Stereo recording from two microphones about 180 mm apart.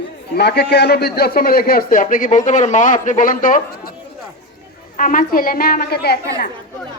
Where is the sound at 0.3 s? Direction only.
65° left (ahead or behind); by 3.9 s 50° left (ahead or behind).